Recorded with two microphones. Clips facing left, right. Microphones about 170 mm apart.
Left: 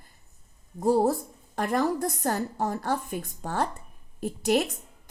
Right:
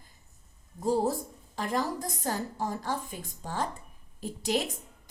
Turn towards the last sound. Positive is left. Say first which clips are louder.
# left 5 dB
turn(degrees=50)  # may be behind; listen again after turning